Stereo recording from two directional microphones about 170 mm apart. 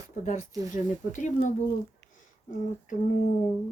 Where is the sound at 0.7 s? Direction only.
50° left (ahead or behind).